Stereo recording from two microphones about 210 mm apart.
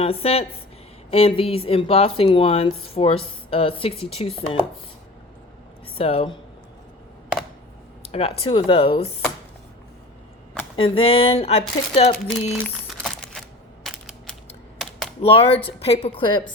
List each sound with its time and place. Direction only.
0.0 s speech: 30° left (ahead or behind)
6.0 s speech: 25° left (ahead or behind)
8.1 s speech: 30° left (ahead or behind)
10.8 s speech: 25° left (ahead or behind)
12.5 s crumpling: 5° left (ahead or behind)
13.8 s a sound: centre (ahead or behind)
14.8 s typing: centre (ahead or behind)
15.2 s speech: 25° left (ahead or behind)